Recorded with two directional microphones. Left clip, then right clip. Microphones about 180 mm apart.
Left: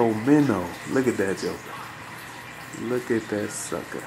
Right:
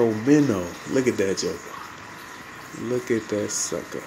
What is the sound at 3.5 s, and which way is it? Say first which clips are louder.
Speech: right 4 dB; 10° right (ahead or behind).